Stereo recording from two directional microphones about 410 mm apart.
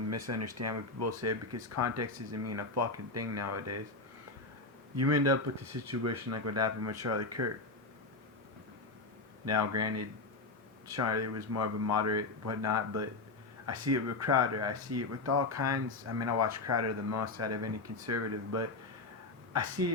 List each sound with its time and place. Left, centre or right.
0.1 s speech: right
4.9 s speech: right
9.5 s speech: right